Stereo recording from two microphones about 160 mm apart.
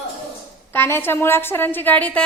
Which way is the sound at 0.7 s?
15° left (ahead or behind).